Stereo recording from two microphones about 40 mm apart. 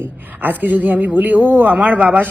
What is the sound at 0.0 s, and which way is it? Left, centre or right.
A woman's voice, right.